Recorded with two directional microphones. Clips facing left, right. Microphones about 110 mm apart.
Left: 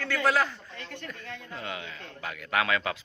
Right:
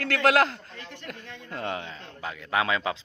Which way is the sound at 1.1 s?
70° right (ahead or behind).